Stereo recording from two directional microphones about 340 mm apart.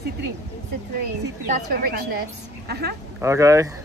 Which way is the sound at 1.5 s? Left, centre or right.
Right.